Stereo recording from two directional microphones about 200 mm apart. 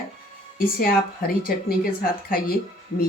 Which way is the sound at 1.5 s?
45° left (ahead or behind).